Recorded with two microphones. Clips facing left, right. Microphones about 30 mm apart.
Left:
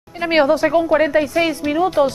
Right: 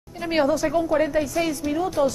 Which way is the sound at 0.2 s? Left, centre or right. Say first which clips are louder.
Left 6 dB; left.